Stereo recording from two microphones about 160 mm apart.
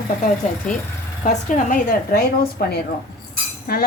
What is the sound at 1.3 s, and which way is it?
Speech, 55° left (ahead or behind).